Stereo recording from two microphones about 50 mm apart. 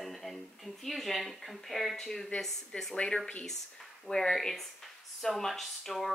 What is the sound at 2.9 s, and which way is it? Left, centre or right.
Speech, centre.